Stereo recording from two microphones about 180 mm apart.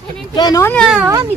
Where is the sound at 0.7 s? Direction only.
5° right (ahead or behind).